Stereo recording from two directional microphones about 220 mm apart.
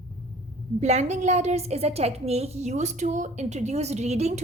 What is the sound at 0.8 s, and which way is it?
A woman's voice, 30° right (ahead or behind).